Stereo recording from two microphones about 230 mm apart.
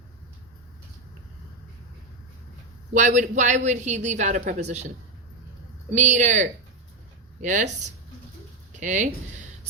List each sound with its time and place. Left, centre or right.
2.9 s a woman's voice: right
5.9 s a woman's voice: right
8.8 s a woman's voice: right